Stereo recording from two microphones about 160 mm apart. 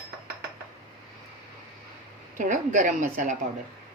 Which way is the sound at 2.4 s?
50° right (ahead or behind).